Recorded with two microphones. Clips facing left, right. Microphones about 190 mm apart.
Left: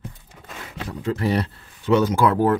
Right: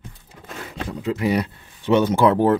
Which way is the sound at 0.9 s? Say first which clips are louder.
Right 1 dB; 10° right (ahead or behind).